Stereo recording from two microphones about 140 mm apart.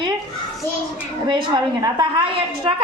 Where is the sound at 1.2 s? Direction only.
35° right (ahead or behind).